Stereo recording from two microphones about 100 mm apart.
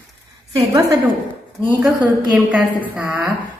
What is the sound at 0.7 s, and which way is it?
Speech, 35° right (ahead or behind).